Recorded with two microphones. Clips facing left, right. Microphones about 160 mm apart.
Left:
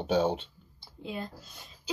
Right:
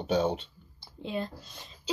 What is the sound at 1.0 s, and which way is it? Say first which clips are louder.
Speech: right 4 dB; 25° right (ahead or behind).